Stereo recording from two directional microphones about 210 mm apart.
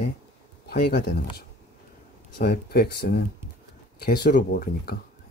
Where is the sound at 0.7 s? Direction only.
50° left (ahead or behind).